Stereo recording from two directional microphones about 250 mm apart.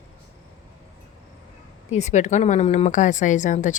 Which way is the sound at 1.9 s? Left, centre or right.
Left.